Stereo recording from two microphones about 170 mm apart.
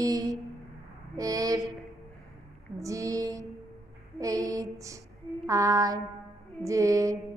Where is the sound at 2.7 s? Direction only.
20° right (ahead or behind).